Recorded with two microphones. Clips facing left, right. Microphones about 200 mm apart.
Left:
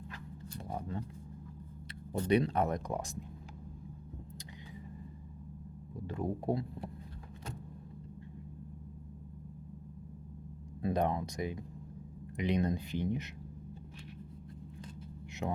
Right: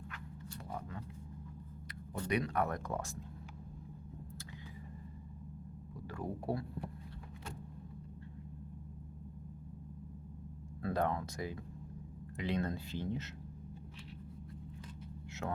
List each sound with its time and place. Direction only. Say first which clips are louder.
0.1 s a sound: left 2 dB; 40° left (ahead or behind)
0.7 s speech: left 6 dB; 30° left (ahead or behind)
2.1 s speech: left 5 dB; 30° left (ahead or behind)
6.1 s speech: left 5 dB; 20° left (ahead or behind)
10.8 s speech: left 3 dB; 20° left (ahead or behind)
15.4 s speech: left 3 dB; 15° left (ahead or behind)